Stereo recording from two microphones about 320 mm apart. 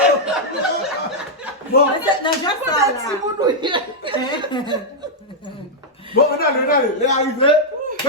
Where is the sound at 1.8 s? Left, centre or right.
Left.